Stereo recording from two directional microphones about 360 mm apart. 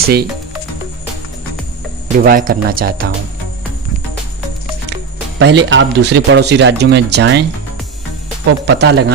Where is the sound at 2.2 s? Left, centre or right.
Right.